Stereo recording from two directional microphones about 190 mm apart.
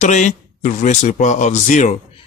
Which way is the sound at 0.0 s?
40° left (ahead or behind).